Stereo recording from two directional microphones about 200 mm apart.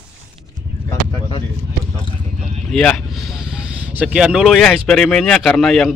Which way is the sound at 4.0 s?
5° right (ahead or behind).